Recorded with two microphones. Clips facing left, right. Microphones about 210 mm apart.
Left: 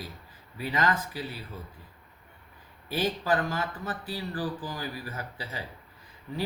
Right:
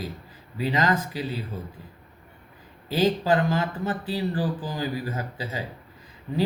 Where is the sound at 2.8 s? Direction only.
25° right (ahead or behind).